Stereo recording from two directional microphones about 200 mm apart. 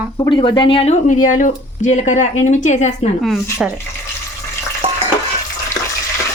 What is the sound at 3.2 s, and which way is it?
Speech, centre (ahead or behind).